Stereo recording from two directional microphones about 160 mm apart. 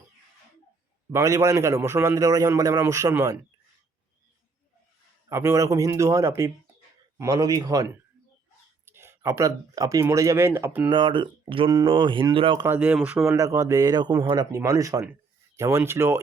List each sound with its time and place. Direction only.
1.1 s a man's voice: 20° right (ahead or behind)
5.3 s a man's voice: 20° right (ahead or behind)
10.9 s speech: 30° right (ahead or behind)
12.6 s speech: 10° right (ahead or behind)
13.2 s a man's voice: 20° right (ahead or behind)